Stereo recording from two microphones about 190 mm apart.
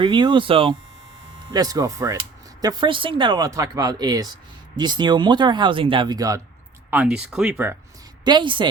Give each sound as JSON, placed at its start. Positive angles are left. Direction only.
{"t": 0.0, "sound": "speech", "side_deg": -25}
{"t": 6.9, "sound": "speech", "side_deg": -5}
{"t": 8.2, "sound": "speech", "side_deg": -25}